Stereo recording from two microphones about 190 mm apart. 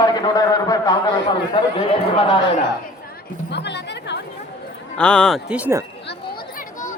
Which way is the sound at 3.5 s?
65° left (ahead or behind).